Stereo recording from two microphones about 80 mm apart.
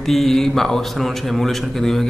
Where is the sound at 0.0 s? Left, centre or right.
Centre.